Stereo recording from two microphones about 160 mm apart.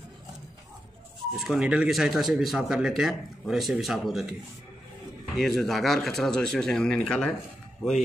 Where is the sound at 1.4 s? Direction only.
5° right (ahead or behind).